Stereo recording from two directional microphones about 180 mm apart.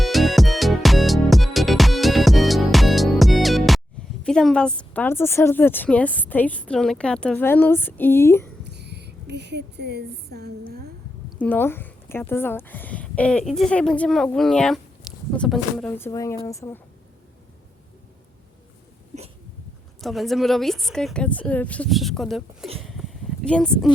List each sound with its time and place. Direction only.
0.0 s music: centre (ahead or behind)
4.2 s a woman's voice: 5° left (ahead or behind)
8.6 s a sound: 70° right (ahead or behind)
11.3 s a woman's voice: 10° left (ahead or behind)
20.0 s a woman's voice: centre (ahead or behind)
22.8 s a sound: centre (ahead or behind)